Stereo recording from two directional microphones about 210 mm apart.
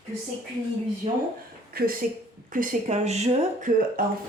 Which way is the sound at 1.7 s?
45° right (ahead or behind).